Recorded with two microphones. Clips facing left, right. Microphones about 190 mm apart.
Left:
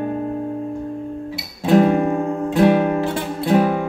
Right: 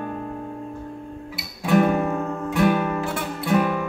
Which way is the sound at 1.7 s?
30° left (ahead or behind).